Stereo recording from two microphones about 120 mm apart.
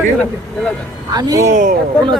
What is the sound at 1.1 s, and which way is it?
Speech, 30° right (ahead or behind).